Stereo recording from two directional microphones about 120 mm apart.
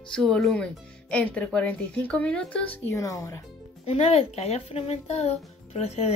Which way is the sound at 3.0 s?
25° left (ahead or behind).